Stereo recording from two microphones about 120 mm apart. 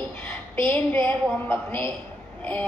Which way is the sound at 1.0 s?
20° left (ahead or behind).